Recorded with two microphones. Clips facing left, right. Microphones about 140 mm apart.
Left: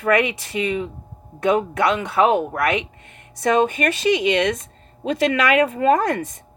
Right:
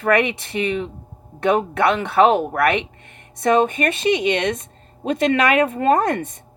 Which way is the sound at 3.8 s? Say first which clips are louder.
Even; 25° right (ahead or behind).